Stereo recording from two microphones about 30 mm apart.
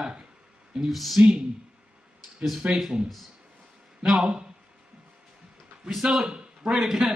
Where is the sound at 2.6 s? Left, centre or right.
Right.